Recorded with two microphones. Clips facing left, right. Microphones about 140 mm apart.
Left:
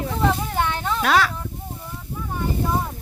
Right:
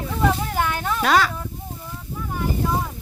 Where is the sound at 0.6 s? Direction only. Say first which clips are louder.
Left 1 dB; 25° left (ahead or behind).